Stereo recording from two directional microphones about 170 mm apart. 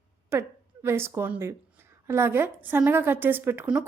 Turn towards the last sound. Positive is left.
turn(degrees=-10)  # may be behind; listen again after turning